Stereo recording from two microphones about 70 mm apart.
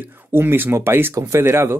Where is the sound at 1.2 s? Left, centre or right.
Right.